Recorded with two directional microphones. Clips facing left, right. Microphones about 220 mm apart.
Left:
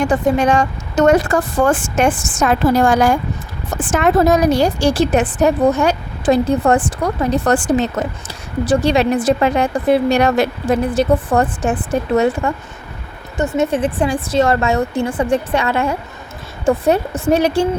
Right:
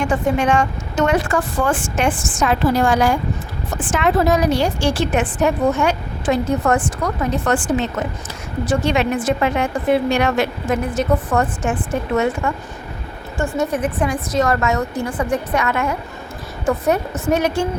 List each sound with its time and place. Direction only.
0.0 s a woman's voice: 40° left (ahead or behind)
13.6 s a woman's voice: 30° left (ahead or behind)